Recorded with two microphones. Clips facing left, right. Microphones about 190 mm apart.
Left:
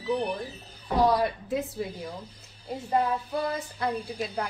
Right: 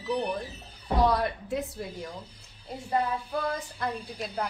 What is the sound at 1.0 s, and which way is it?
A woman's voice, centre (ahead or behind).